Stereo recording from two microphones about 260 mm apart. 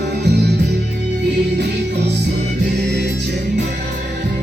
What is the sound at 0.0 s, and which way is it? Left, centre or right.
Music, right.